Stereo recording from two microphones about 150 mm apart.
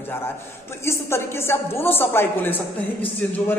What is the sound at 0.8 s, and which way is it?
A woman's voice, 15° left (ahead or behind).